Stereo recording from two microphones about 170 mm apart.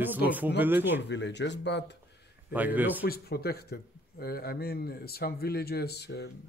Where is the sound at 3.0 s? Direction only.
65° left (ahead or behind); by 6.3 s 80° left.